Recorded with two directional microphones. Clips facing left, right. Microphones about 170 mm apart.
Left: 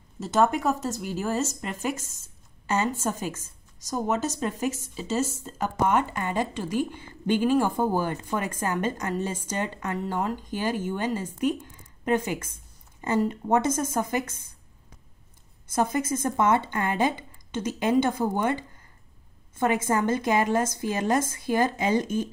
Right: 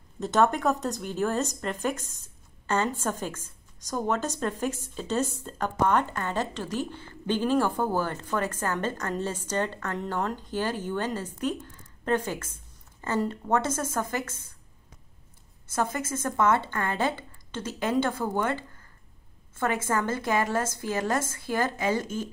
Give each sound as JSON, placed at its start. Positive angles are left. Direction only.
{"t": 0.2, "sound": "a woman's voice", "side_deg": 0}
{"t": 15.7, "sound": "a woman's voice", "side_deg": 15}